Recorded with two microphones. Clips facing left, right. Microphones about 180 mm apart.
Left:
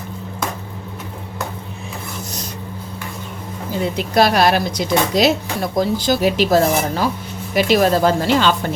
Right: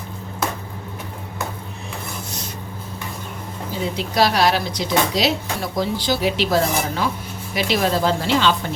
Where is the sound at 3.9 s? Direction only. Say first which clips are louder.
Left 4 dB; 50° left (ahead or behind).